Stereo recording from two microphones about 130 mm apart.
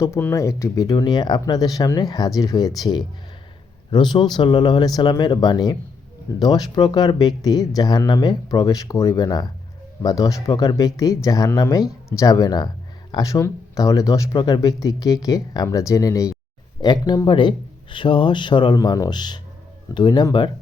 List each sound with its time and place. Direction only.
0.0 s speech: 20° left (ahead or behind)